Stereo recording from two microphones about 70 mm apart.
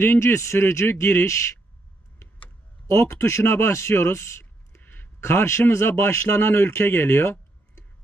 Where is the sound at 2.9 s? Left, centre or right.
Left.